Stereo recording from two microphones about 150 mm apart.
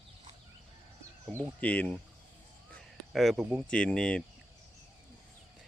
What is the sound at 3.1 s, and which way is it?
Speech, centre (ahead or behind).